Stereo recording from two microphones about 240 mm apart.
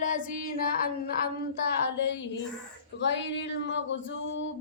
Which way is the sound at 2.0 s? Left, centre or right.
Left.